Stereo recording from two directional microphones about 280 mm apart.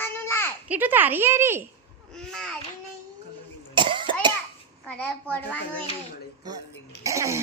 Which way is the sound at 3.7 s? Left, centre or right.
Centre.